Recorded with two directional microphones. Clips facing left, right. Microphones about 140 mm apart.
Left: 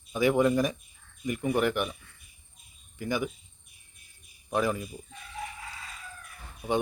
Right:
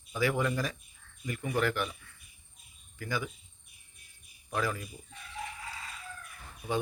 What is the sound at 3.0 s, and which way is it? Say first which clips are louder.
Speech: left 5 dB; 20° left (ahead or behind).